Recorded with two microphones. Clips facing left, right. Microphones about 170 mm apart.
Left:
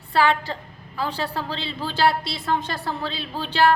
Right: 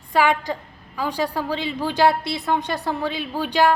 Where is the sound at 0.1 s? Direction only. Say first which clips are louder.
Right 1 dB; 15° right (ahead or behind).